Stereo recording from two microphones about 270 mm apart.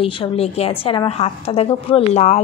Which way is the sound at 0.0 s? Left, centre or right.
Left.